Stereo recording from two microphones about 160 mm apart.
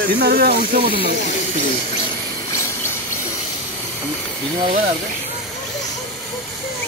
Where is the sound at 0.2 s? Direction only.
70° right (ahead or behind).